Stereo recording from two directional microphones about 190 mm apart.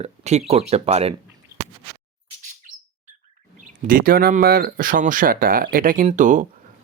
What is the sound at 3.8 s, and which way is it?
Speech, 50° right (ahead or behind).